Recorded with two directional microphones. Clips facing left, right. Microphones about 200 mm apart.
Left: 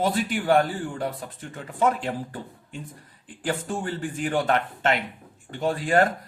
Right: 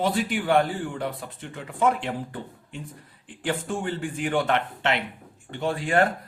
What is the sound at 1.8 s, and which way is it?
Speech, 40° left (ahead or behind).